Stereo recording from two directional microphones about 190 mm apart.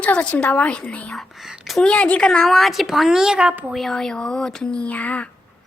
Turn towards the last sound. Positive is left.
turn(degrees=5)  # may be behind; listen again after turning